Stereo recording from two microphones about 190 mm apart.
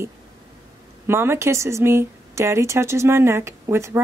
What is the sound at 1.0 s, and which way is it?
A woman's voice, 15° right (ahead or behind).